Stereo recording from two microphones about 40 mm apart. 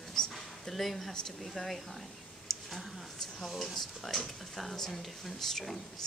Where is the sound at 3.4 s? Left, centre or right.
Centre.